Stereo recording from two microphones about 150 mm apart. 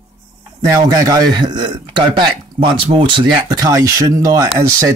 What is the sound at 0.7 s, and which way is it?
Speech, 20° right (ahead or behind).